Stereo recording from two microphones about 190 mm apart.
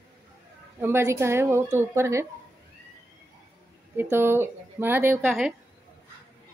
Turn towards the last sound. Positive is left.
turn(degrees=-5)  # may be behind; listen again after turning